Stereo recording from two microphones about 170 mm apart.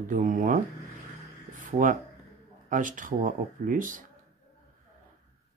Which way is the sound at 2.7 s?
50° right (ahead or behind).